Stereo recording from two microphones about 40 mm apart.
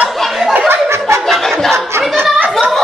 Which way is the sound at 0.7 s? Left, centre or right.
Right.